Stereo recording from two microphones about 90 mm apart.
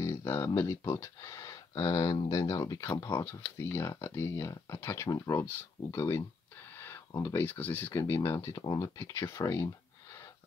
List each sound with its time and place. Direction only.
0.0 s a sound: 35° left (ahead or behind)
0.6 s speech: 35° left (ahead or behind)
5.1 s speech: 40° left (ahead or behind)
5.9 s speech: 30° left (ahead or behind)
7.3 s speech: 20° left (ahead or behind)
8.0 s speech: 30° left (ahead or behind)
8.5 s speech: 45° left (ahead or behind)